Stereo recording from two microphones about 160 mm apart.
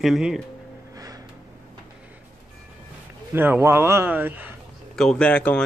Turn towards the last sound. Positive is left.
turn(degrees=5)  # may be behind; listen again after turning